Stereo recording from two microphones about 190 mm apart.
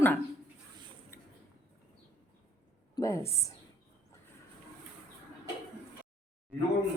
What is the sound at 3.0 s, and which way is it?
Speech, 15° left (ahead or behind).